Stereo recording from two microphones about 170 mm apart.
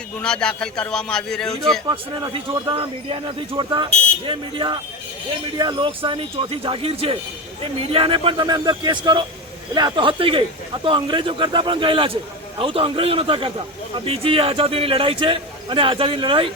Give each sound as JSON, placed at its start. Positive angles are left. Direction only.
{"t": 0.2, "sound": "a man's voice", "side_deg": 5}
{"t": 1.9, "sound": "a man's voice", "side_deg": -25}